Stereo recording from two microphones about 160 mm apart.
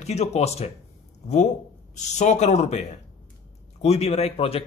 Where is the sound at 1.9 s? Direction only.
45° left (ahead or behind).